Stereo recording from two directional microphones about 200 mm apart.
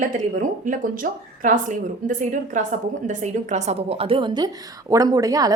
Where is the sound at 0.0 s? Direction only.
40° right (ahead or behind).